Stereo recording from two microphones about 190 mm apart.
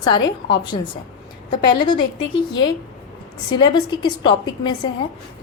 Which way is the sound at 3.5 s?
25° left (ahead or behind).